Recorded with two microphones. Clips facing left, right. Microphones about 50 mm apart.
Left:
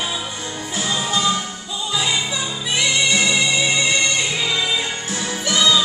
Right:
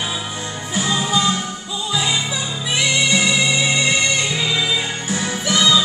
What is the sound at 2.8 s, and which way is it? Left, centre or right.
Music, centre.